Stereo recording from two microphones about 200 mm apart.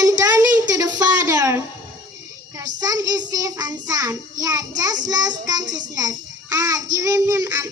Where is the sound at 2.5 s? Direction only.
20° right (ahead or behind).